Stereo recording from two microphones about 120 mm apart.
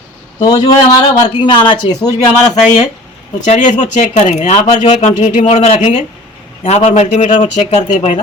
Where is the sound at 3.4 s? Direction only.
90° left.